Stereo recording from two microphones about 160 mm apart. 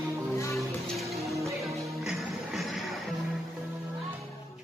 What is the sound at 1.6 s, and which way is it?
Music, centre (ahead or behind).